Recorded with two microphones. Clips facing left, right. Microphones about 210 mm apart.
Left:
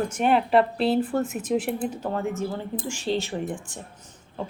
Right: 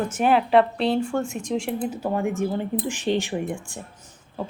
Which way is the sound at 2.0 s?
15° right (ahead or behind).